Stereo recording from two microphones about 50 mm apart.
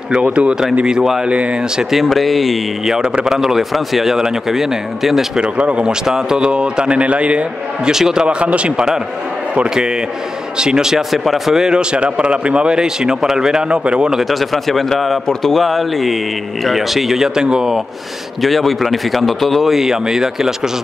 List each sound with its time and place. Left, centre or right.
0.1 s speech: right
0.8 s speech: centre
1.2 s speech: right
2.0 s speech: centre
3.0 s speech: centre
3.3 s speech: centre
5.4 s speech: right
7.9 s speech: centre
10.6 s speech: centre
14.1 s speech: centre
18.4 s speech: centre